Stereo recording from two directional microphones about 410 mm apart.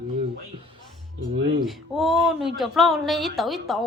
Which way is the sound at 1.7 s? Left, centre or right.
Centre.